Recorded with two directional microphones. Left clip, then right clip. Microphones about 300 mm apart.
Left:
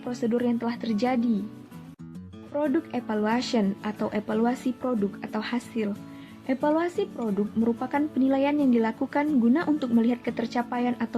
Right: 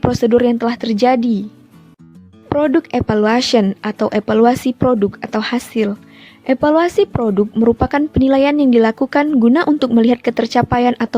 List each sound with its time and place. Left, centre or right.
0.1 s a woman's voice: right
2.6 s a woman's voice: right